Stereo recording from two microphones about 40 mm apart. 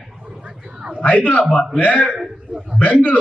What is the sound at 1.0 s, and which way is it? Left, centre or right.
A man's voice, left.